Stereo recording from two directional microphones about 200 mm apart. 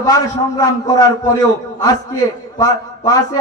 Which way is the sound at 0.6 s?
20° left (ahead or behind).